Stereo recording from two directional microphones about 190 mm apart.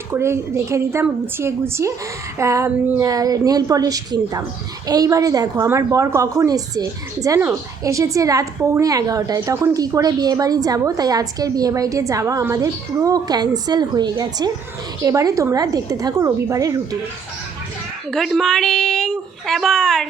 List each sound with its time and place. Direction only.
0.1 s a woman's voice: 15° right (ahead or behind)
18.1 s speech: centre (ahead or behind)